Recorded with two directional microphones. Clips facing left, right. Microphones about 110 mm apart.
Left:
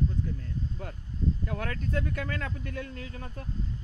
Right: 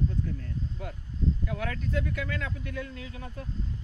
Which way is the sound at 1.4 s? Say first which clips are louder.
Even; 45° left (ahead or behind).